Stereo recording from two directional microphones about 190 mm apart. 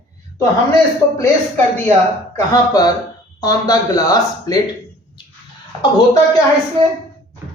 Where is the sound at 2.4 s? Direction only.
20° left (ahead or behind).